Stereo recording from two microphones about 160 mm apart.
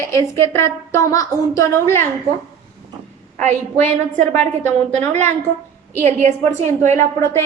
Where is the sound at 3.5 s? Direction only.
45° right (ahead or behind).